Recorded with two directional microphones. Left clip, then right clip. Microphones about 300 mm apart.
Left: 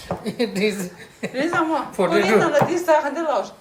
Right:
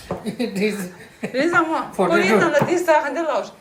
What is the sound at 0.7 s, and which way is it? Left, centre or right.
A woman's voice, centre.